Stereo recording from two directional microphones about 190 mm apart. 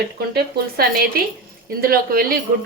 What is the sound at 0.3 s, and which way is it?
Speech, 55° right (ahead or behind).